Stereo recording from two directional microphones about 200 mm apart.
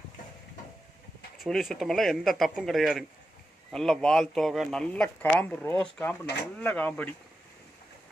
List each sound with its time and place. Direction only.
1.4 s speech: centre (ahead or behind)